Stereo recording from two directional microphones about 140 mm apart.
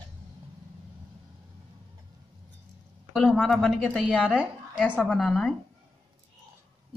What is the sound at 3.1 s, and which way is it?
A woman's voice, 5° left (ahead or behind).